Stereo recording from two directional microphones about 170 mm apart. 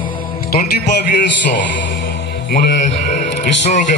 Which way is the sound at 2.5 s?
60° left (ahead or behind).